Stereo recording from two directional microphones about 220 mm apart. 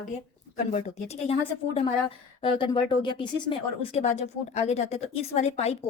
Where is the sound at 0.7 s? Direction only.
30° left (ahead or behind).